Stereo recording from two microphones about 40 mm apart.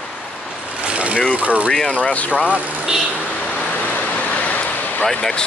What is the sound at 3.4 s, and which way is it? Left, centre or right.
Vehicle, left.